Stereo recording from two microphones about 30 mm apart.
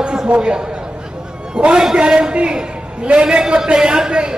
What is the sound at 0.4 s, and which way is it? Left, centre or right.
Speech, right.